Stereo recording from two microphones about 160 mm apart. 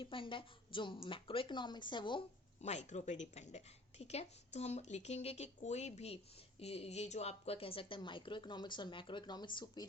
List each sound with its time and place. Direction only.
0.0 s a woman's voice: 30° left (ahead or behind)
2.6 s a woman's voice: 45° left (ahead or behind); by 9.8 s 30° left (ahead or behind)